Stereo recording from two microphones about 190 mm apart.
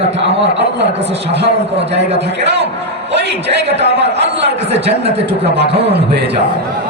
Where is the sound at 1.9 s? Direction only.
65° right (ahead or behind).